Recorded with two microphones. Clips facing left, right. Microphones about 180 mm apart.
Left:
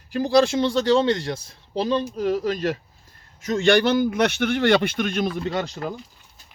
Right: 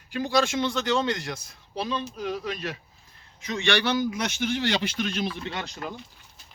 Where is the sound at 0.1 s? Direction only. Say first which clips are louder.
Left 6 dB; 35° left (ahead or behind).